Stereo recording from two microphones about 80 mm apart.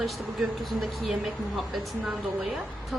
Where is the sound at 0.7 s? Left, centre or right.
Centre.